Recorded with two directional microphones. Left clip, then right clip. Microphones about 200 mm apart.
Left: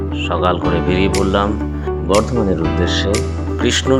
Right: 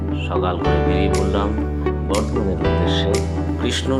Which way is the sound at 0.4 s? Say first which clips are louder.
Left 3 dB; 25° left (ahead or behind).